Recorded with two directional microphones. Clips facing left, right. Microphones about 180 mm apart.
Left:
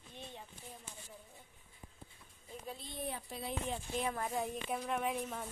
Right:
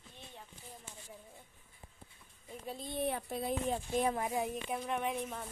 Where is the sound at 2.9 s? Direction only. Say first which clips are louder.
Right 8 dB; 65° right (ahead or behind).